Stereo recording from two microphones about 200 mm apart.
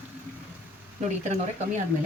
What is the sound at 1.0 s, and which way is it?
Speech, 35° right (ahead or behind).